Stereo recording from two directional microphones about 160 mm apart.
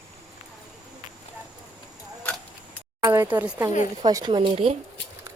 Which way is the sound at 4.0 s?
25° right (ahead or behind).